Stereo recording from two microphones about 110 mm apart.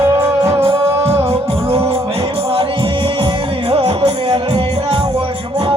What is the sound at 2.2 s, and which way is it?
Music, 45° right (ahead or behind).